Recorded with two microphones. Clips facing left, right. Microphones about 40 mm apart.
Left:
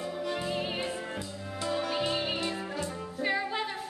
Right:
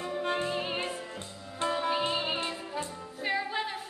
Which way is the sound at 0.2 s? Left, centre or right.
Right.